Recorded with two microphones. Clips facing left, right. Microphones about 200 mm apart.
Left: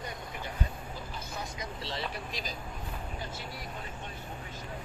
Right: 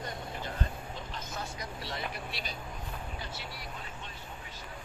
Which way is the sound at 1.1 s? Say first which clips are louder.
Even; 15° left (ahead or behind).